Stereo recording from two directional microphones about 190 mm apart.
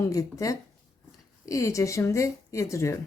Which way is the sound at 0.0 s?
15° left (ahead or behind).